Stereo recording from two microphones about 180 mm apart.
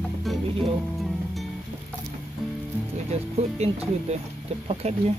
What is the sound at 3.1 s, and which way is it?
Speech, 35° right (ahead or behind).